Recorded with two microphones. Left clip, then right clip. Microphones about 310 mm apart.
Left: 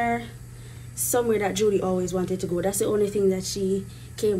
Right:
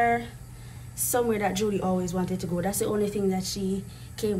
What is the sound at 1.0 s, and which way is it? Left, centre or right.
Speech, centre.